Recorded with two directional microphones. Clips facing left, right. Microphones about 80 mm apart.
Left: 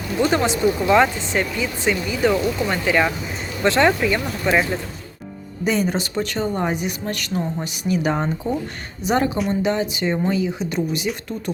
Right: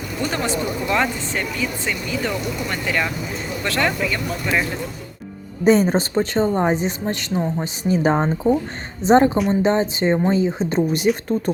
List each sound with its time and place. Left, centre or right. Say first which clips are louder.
0.3 s speech: left 4 dB; centre
1.2 s speech: left 2 dB; centre
5.6 s speech: right 6 dB; right
11.1 s speech: right 7 dB; centre